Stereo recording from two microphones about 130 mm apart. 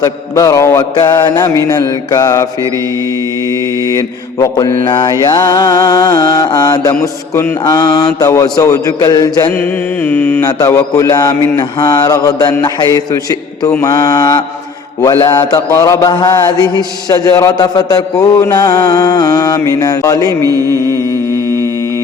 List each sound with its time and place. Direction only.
0.0 s mantra: 30° left (ahead or behind)
0.9 s mantra: 35° left (ahead or behind)
3.8 s mantra: 30° left (ahead or behind)
7.0 s mantra: 20° left (ahead or behind)
7.6 s mantra: 30° left (ahead or behind)
9.6 s mantra: 15° left (ahead or behind)
10.4 s mantra: 30° left (ahead or behind)
20.5 s mantra: 25° right (ahead or behind)